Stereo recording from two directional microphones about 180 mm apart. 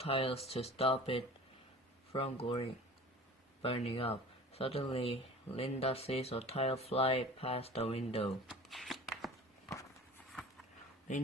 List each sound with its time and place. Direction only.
0.0 s speech: 35° left (ahead or behind)
8.4 s shuffling cards: centre (ahead or behind)